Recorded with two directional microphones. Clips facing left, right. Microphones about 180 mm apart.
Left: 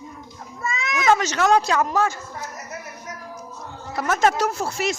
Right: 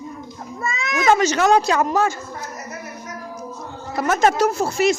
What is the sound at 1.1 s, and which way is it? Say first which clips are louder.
Speech: right 3 dB; 5° right (ahead or behind).